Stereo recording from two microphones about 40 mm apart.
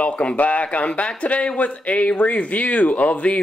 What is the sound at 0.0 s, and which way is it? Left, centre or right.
Speech, left.